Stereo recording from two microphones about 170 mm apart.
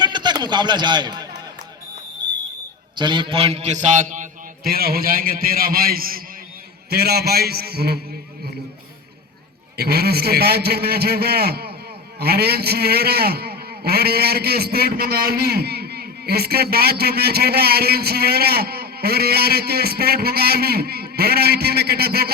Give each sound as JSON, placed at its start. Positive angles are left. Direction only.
{"t": 0.0, "sound": "a sound", "side_deg": -25}
{"t": 2.9, "sound": "a man's voice", "side_deg": -25}
{"t": 9.7, "sound": "a man's voice", "side_deg": -70}